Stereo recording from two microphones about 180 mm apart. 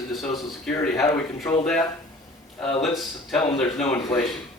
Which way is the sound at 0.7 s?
15° left (ahead or behind).